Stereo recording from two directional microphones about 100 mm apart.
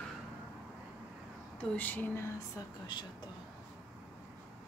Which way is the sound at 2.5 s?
45° left (ahead or behind).